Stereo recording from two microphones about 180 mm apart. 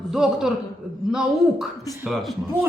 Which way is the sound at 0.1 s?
5° right (ahead or behind).